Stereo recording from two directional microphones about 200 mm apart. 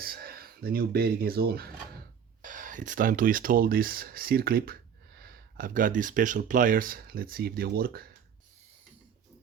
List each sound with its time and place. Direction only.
0.0 s speech: 50° right (ahead or behind)